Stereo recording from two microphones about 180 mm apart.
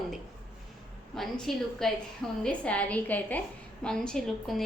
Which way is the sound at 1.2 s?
Centre (ahead or behind).